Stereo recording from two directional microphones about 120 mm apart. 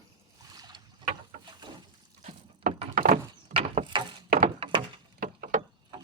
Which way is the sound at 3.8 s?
40° right (ahead or behind).